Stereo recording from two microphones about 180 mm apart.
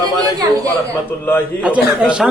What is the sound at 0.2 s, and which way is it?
Speech, 20° right (ahead or behind).